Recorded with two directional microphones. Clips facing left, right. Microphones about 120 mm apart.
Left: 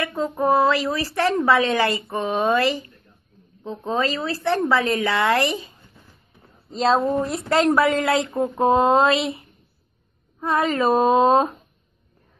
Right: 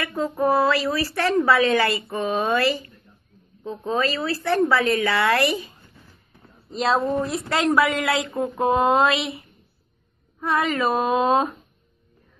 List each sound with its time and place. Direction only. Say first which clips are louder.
0.0 s speech: even; 20° left (ahead or behind)
6.7 s speech: left 3 dB; 25° left (ahead or behind)
7.0 s speech: left 1 dB; centre (ahead or behind)
7.3 s speech: left 2 dB; 25° left (ahead or behind)
10.4 s speech: left 2 dB; 30° left (ahead or behind)